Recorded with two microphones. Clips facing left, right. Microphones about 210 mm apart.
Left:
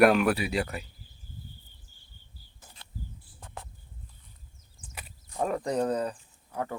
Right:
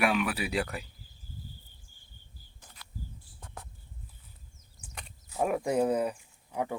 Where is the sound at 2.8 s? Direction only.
25° left (ahead or behind).